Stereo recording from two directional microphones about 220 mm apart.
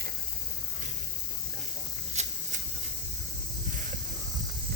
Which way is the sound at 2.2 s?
30° right (ahead or behind).